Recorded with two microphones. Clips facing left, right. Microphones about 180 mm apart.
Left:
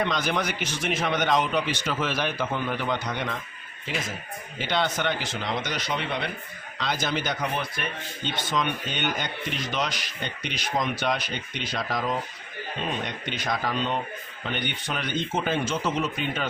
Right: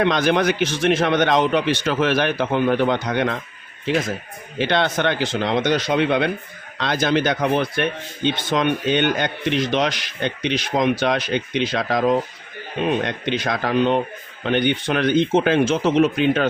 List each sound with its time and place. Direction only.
0.0 s speech: 75° right (ahead or behind)
4.5 s speech: 75° right (ahead or behind)
13.0 s speech: 90° right; by 14.0 s 70° right (ahead or behind)
14.4 s speech: 85° right